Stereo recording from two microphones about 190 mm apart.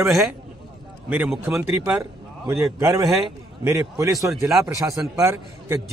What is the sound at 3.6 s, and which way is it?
A man's voice, 15° right (ahead or behind).